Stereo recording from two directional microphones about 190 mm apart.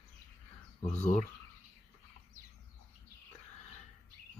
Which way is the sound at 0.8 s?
35° left (ahead or behind).